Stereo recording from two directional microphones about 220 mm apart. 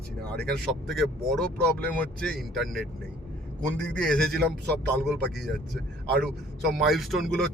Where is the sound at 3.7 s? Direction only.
5° left (ahead or behind).